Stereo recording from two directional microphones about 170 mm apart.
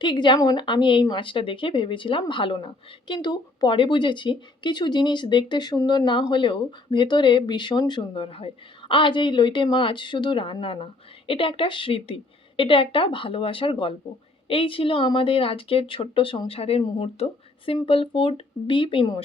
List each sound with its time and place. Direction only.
0.0 s speech: 25° left (ahead or behind)